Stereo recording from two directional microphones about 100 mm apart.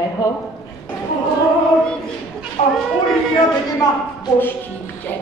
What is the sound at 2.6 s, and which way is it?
Speech, 90° left.